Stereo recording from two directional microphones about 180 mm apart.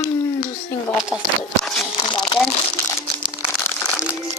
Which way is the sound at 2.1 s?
25° left (ahead or behind).